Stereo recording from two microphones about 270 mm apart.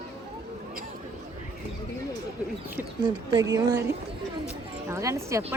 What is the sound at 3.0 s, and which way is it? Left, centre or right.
Speech, centre.